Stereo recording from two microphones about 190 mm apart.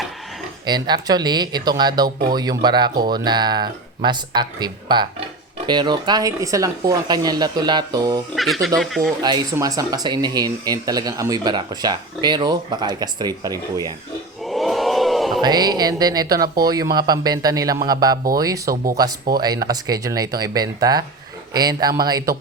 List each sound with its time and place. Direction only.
0.6 s speech: 20° right (ahead or behind)
8.4 s speech: centre (ahead or behind)
9.2 s speech: 20° right (ahead or behind)
14.4 s crowd: centre (ahead or behind)
15.4 s speech: 20° right (ahead or behind)